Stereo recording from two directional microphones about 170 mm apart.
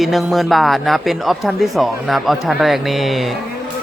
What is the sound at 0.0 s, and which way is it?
A woman's voice, centre (ahead or behind).